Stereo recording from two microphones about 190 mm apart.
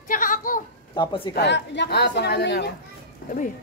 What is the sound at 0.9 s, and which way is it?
Speech, 25° left (ahead or behind).